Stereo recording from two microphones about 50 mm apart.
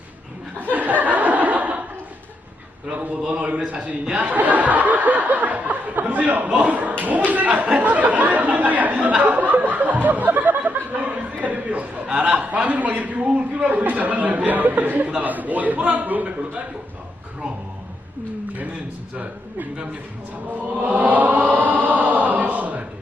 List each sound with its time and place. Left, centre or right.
0.6 s laughter: right
2.9 s a man's voice: right
4.0 s speech: centre
4.3 s a sound: right
6.5 s a man's voice: right
7.3 s a sound: right
12.0 s a man's voice: centre
12.3 s a man's voice: right
19.1 s a man's voice: right
20.5 s chant: right